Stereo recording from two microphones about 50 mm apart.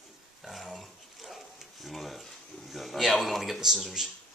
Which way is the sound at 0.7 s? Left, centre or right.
Centre.